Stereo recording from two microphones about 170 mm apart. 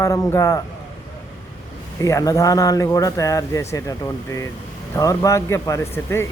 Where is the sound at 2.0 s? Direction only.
20° left (ahead or behind).